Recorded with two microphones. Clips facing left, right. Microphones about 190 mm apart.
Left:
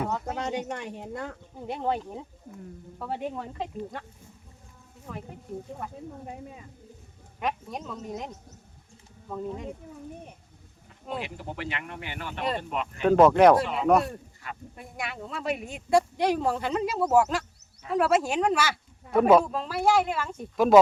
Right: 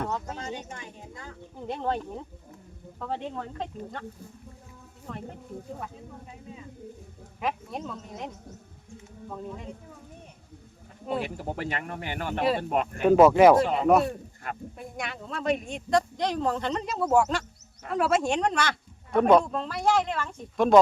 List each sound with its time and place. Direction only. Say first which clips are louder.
0.3 s speech: left 6 dB; 70° left (ahead or behind)
1.6 s speech: left 1 dB; 10° left (ahead or behind)
5.1 s speech: even; 5° left (ahead or behind)
7.3 s speech: even; centre (ahead or behind)
11.1 s speech: right 4 dB; 45° right (ahead or behind)
13.0 s speech: right 1 dB; 5° right (ahead or behind)
14.4 s speech: right 4 dB; 50° right (ahead or behind)
14.8 s speech: even; centre (ahead or behind)